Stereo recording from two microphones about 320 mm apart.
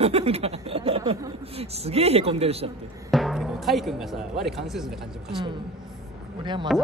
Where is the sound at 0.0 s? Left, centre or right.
Centre.